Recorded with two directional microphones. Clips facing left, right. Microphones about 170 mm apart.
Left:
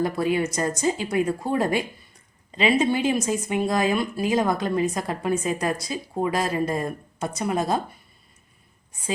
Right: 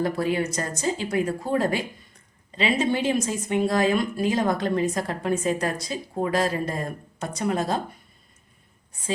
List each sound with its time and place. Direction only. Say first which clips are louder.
0.0 s speech: left 1 dB; 15° left (ahead or behind)